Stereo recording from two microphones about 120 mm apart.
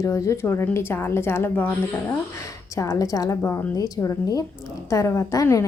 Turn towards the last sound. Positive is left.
turn(degrees=25)  # may be behind; listen again after turning